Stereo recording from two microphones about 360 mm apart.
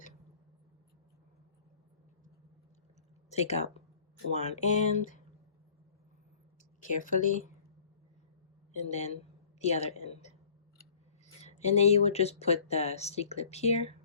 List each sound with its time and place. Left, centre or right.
3.2 s speech: centre
7.0 s speech: left
8.7 s speech: centre
11.4 s speech: centre